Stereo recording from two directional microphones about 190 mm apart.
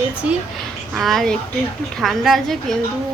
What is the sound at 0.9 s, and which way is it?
Speech, centre (ahead or behind).